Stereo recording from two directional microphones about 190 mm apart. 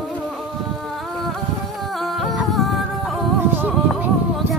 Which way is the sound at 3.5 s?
10° right (ahead or behind).